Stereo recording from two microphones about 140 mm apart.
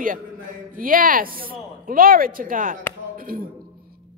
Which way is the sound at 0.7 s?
85° right.